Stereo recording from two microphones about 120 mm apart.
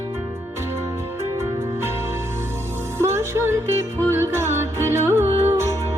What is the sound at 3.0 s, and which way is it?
Music, 20° right (ahead or behind).